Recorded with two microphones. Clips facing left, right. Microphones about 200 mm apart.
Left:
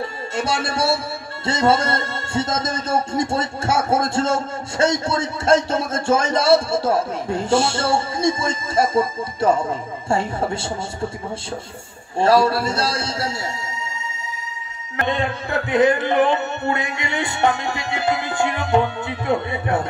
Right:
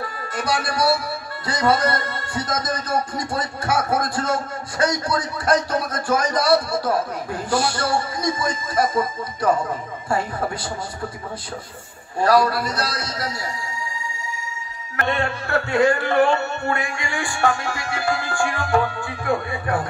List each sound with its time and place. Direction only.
0.0 s speech: 25° left (ahead or behind)
12.2 s speech: 25° left (ahead or behind)
15.0 s speech: 20° left (ahead or behind)